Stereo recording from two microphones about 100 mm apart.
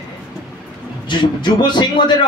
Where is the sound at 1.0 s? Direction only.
50° left (ahead or behind).